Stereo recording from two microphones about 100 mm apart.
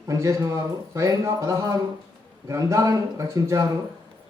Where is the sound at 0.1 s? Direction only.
35° right (ahead or behind).